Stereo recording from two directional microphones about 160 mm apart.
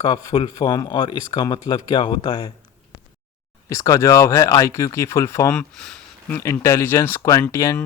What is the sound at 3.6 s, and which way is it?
Speech, 20° left (ahead or behind).